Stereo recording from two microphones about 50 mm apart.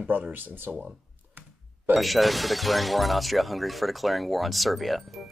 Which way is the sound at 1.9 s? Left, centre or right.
Centre.